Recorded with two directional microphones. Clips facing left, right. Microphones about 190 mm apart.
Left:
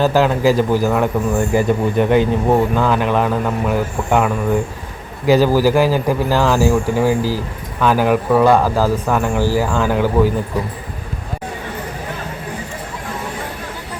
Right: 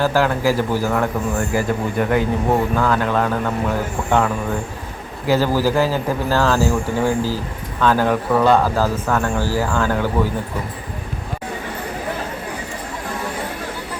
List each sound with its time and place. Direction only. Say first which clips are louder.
0.0 s speech: left 3 dB; 20° left (ahead or behind)